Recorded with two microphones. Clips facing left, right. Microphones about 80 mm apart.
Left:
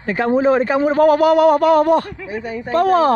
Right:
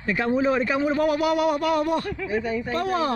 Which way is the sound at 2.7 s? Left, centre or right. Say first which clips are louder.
Left 12 dB; left.